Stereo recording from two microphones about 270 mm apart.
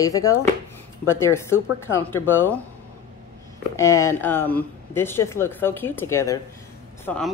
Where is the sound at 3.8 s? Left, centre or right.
Centre.